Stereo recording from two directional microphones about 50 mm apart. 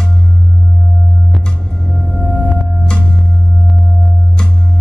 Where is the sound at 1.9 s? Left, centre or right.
Centre.